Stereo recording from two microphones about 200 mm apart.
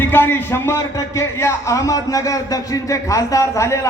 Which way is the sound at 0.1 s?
10° left (ahead or behind).